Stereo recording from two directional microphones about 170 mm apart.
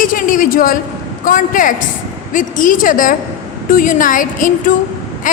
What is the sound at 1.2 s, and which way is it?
A woman's voice, 50° left (ahead or behind).